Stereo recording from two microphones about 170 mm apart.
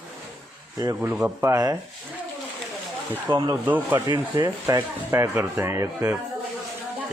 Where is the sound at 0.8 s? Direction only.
20° right (ahead or behind).